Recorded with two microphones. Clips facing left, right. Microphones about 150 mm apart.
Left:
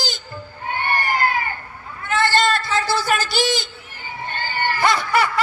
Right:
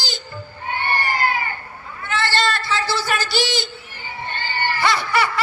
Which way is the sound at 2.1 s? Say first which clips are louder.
Left 3 dB; 50° left (ahead or behind).